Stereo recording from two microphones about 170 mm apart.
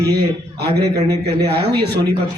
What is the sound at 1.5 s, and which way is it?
Speech, 70° right (ahead or behind).